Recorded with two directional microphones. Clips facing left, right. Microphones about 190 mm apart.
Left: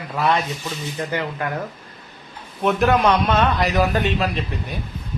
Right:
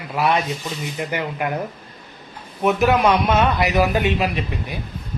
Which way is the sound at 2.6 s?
5° right (ahead or behind).